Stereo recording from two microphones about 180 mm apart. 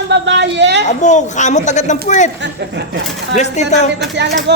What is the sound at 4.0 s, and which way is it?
Speech, 70° right (ahead or behind).